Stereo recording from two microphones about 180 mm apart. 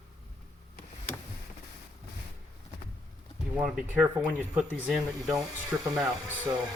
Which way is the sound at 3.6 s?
5° right (ahead or behind).